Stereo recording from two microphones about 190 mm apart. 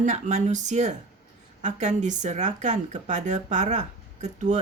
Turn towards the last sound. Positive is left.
turn(degrees=-40)  # may be behind; listen again after turning